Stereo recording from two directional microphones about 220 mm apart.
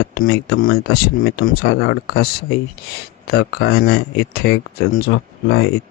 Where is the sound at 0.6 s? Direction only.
45° left (ahead or behind).